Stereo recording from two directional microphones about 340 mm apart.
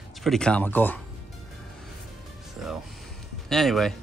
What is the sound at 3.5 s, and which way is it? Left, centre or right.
Speech, centre.